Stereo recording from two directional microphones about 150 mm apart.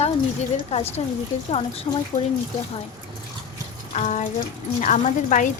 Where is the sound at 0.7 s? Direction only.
45° left (ahead or behind).